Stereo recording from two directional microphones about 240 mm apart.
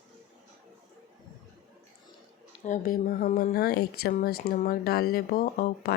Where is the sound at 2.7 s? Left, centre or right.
Left.